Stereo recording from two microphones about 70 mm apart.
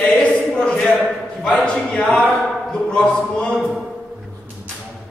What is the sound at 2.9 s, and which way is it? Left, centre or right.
Speech, centre.